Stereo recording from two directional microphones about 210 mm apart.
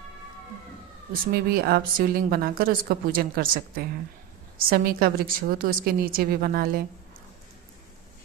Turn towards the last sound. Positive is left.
turn(degrees=-45)  # may be behind; listen again after turning